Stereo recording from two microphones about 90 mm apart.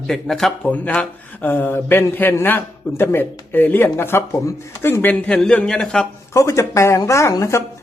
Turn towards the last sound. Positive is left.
turn(degrees=35)  # may be behind; listen again after turning